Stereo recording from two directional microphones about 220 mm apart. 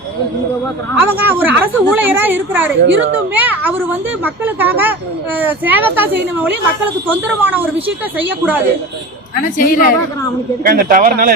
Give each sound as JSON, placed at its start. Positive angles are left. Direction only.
{"t": 0.9, "sound": "a woman's voice", "side_deg": -10}
{"t": 2.8, "sound": "a child's voice", "side_deg": -55}
{"t": 3.3, "sound": "a woman's voice", "side_deg": -10}
{"t": 9.3, "sound": "a woman's voice", "side_deg": 40}
{"t": 10.6, "sound": "a man's voice", "side_deg": -40}